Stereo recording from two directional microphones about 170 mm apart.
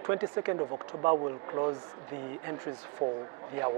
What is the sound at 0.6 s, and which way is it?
Speech, 30° right (ahead or behind).